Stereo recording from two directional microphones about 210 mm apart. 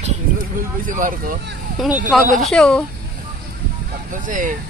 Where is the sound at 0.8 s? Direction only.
40° right (ahead or behind).